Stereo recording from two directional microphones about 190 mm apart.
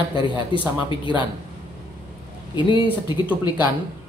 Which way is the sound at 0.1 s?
25° left (ahead or behind).